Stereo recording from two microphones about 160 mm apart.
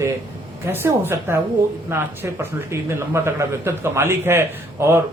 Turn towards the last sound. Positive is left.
turn(degrees=-15)  # may be behind; listen again after turning